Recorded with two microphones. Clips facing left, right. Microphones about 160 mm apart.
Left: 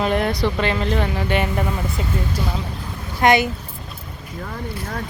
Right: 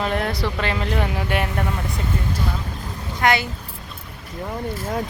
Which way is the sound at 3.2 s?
20° left (ahead or behind).